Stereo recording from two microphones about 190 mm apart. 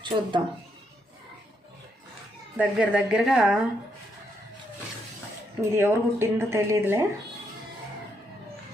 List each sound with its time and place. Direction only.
0.0 s speech: 25° right (ahead or behind)
2.6 s speech: 5° right (ahead or behind)
5.7 s speech: 10° right (ahead or behind)